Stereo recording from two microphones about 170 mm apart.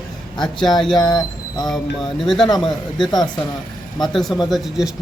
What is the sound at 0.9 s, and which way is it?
Speech, 25° left (ahead or behind).